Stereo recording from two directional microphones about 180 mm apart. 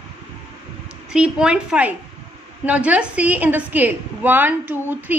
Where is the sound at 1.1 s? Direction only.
5° right (ahead or behind).